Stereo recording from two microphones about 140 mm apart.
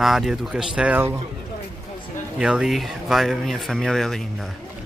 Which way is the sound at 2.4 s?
5° right (ahead or behind).